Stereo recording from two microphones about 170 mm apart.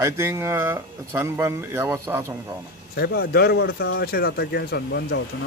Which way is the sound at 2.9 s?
70° left (ahead or behind).